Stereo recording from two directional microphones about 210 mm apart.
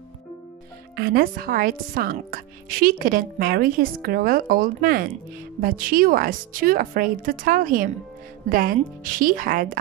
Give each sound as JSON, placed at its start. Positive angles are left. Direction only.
{"t": 0.9, "sound": "a woman's voice", "side_deg": -45}